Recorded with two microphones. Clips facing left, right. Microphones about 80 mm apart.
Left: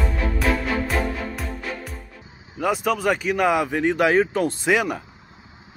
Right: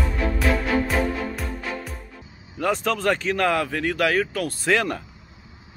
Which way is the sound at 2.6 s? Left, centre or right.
Centre.